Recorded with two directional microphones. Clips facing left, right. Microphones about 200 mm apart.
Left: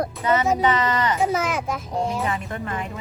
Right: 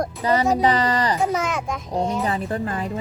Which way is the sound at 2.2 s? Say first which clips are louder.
Right 3 dB; 35° right (ahead or behind).